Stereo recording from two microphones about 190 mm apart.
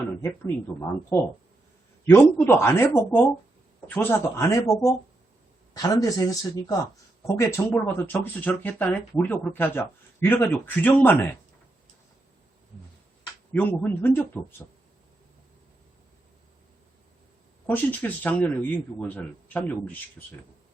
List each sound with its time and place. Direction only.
0.2 s speech: 15° left (ahead or behind)
7.3 s speech: 15° left (ahead or behind)
13.5 s speech: 10° left (ahead or behind)
17.7 s speech: 10° left (ahead or behind)